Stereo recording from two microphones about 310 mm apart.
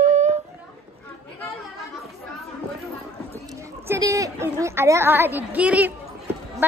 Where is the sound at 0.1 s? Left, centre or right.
Right.